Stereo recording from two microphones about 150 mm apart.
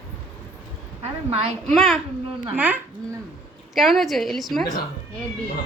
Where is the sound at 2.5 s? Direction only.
10° right (ahead or behind).